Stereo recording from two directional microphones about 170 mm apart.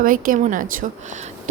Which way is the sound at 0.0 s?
55° right (ahead or behind).